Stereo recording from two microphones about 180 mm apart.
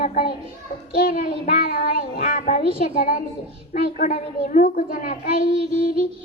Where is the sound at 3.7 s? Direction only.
50° left (ahead or behind).